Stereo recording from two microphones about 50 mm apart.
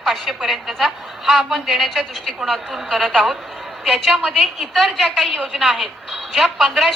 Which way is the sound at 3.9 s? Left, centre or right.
Centre.